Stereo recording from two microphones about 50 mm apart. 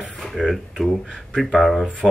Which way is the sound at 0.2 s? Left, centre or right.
Centre.